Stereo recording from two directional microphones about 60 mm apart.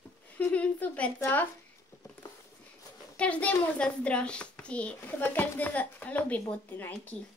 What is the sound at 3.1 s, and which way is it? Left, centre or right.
A child's voice, left.